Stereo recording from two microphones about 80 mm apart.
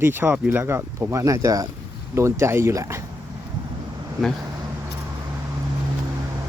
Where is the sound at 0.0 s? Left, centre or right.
Right.